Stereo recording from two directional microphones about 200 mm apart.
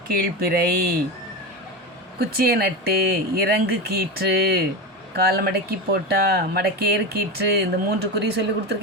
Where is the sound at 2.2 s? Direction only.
50° right (ahead or behind).